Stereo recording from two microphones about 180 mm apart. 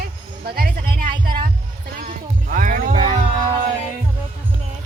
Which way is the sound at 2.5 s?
50° right (ahead or behind).